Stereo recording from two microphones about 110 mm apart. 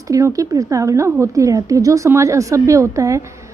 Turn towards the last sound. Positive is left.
turn(degrees=-30)  # may be behind; listen again after turning